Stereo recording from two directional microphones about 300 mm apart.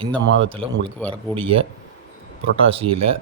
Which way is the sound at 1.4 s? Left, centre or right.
Centre.